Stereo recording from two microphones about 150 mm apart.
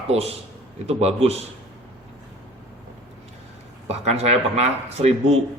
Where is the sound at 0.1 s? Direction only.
45° right (ahead or behind).